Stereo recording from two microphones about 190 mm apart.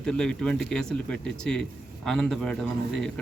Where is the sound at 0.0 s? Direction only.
5° left (ahead or behind).